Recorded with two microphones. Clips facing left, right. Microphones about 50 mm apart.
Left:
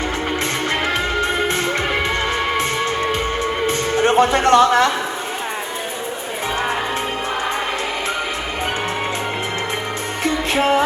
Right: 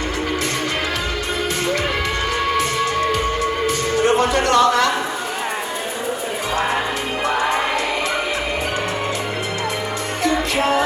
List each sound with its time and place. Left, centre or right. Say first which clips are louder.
2.5 s music: right 1 dB; left
10.2 s music: left 1 dB; left